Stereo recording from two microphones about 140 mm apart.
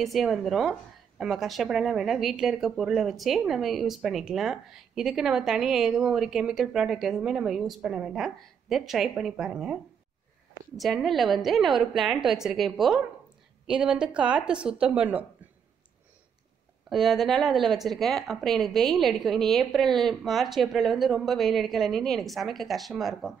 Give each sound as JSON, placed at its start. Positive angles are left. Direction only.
{"t": 0.0, "sound": "a woman's voice", "side_deg": 0}
{"t": 10.8, "sound": "a woman's voice", "side_deg": 0}
{"t": 16.9, "sound": "a woman's voice", "side_deg": 0}